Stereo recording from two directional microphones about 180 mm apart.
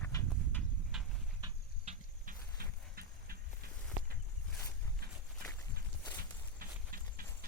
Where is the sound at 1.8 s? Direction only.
40° right (ahead or behind).